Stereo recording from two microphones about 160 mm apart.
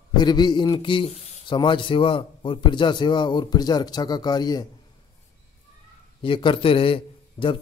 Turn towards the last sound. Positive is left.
turn(degrees=35)  # may be behind; listen again after turning